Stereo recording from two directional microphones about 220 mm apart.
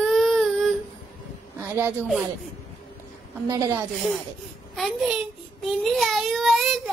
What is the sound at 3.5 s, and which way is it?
Speech, 15° right (ahead or behind).